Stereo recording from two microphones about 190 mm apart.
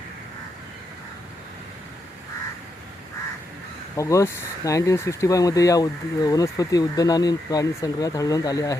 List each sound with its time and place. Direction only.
3.9 s speech: 15° left (ahead or behind)